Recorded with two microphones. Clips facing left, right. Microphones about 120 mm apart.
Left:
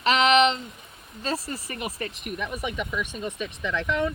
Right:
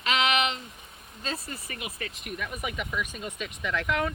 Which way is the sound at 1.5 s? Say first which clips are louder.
Left 6 dB; 35° left (ahead or behind).